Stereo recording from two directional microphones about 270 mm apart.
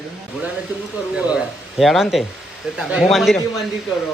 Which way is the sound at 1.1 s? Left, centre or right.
Centre.